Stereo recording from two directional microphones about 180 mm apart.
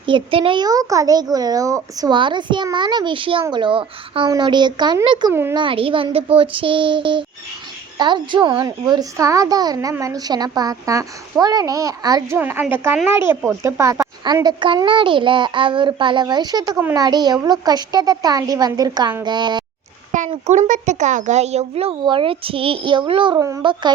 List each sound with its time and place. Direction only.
0.0 s a child's voice: 30° right (ahead or behind)
5.3 s a woman's voice: 15° right (ahead or behind)
5.5 s a child's voice: 30° right (ahead or behind)
20.1 s a child's voice: 45° right (ahead or behind); by 23.9 s 20° right (ahead or behind)